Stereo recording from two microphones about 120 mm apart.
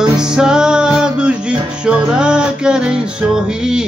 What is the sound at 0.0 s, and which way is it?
Music, 5° right (ahead or behind).